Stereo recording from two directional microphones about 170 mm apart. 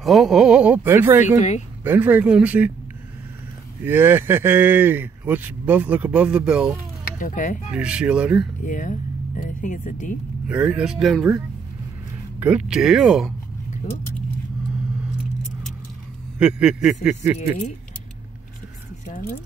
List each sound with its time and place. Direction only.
0.0 s speech: centre (ahead or behind)
3.8 s speech: 10° right (ahead or behind)
7.2 s speech: 50° left (ahead or behind)
7.7 s speech: 5° right (ahead or behind)
8.6 s speech: 50° left (ahead or behind)
10.5 s speech: 5° right (ahead or behind)
16.3 s speech: 5° right (ahead or behind)